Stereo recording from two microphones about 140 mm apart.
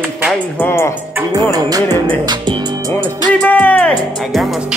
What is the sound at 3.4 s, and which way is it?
Speech, 10° left (ahead or behind).